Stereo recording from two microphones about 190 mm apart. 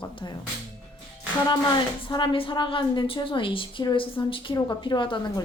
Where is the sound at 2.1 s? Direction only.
25° left (ahead or behind).